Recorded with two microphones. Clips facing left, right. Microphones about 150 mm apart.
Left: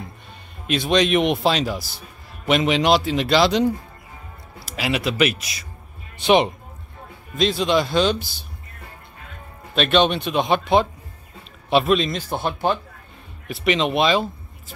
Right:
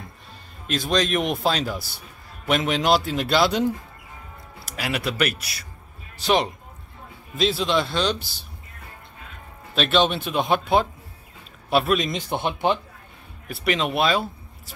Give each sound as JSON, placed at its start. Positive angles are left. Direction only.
{"t": 0.9, "sound": "a man's voice", "side_deg": 0}
{"t": 4.7, "sound": "speech", "side_deg": 5}
{"t": 7.3, "sound": "a man's voice", "side_deg": -5}
{"t": 9.8, "sound": "a man's voice", "side_deg": -5}
{"t": 12.1, "sound": "speech", "side_deg": -15}
{"t": 13.7, "sound": "a man's voice", "side_deg": 0}